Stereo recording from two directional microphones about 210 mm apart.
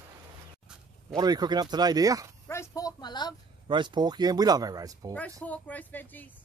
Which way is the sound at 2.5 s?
15° left (ahead or behind).